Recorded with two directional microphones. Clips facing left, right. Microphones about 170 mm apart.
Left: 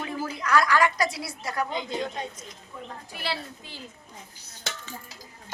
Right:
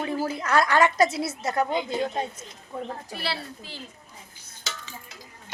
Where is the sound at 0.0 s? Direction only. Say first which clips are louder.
Right 4 dB; 30° right (ahead or behind).